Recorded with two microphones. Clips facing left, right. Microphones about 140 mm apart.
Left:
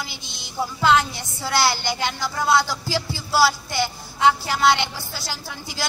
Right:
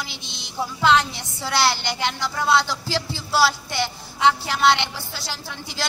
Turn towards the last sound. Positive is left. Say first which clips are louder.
# even
turn(degrees=5)  # may be behind; listen again after turning